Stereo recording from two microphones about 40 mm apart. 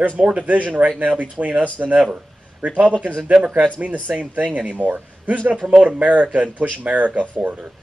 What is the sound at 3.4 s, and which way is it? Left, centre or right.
Speech, centre.